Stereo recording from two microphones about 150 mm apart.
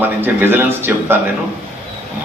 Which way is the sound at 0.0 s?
15° right (ahead or behind).